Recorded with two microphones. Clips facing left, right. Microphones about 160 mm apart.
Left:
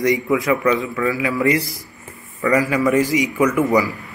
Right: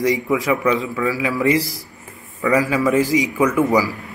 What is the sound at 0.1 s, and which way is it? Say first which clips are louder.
A man's voice: left 1 dB; 5° right (ahead or behind).